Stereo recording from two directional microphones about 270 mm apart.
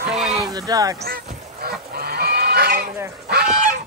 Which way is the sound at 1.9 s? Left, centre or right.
Right.